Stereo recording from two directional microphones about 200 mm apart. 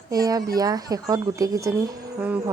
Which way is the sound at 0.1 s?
20° right (ahead or behind).